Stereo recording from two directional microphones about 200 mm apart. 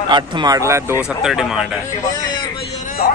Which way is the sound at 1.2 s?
5° right (ahead or behind).